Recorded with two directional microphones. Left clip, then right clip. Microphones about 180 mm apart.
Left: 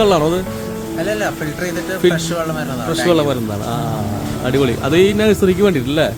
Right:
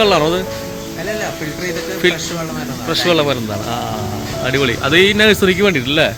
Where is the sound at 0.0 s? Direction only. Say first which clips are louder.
Right 1 dB; 5° left (ahead or behind).